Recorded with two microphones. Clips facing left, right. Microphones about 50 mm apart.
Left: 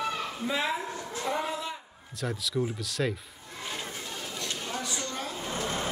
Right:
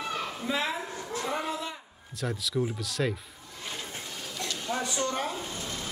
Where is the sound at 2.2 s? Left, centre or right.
Centre.